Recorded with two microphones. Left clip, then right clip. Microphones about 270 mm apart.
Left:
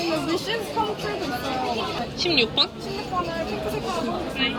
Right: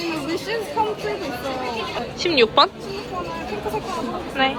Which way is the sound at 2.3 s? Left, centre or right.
Centre.